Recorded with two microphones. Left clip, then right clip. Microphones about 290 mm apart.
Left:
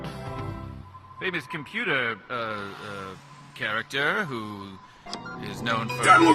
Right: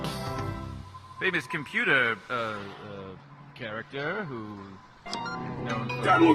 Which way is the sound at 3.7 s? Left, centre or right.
Left.